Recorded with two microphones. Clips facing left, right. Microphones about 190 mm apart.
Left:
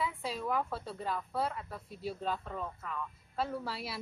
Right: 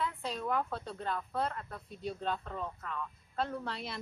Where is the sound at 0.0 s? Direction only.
5° left (ahead or behind).